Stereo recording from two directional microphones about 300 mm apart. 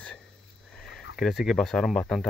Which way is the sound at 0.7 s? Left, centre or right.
Centre.